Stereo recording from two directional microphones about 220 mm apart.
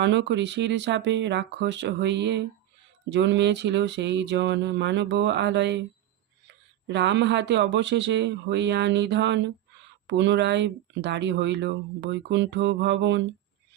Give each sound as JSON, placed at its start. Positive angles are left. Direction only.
{"t": 0.0, "sound": "speech", "side_deg": -55}
{"t": 6.8, "sound": "speech", "side_deg": -50}